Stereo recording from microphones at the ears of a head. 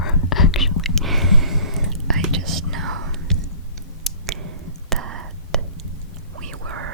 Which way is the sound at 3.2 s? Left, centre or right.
Left.